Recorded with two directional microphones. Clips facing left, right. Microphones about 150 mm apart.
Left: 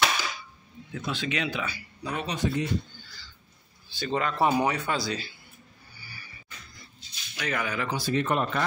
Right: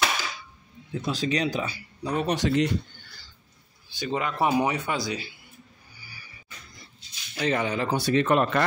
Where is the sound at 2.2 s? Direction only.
80° right.